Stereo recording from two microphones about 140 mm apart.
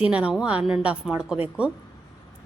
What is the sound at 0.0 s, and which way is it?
A woman's voice, 10° right (ahead or behind).